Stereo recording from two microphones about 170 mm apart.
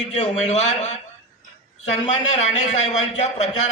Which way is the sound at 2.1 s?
40° left (ahead or behind).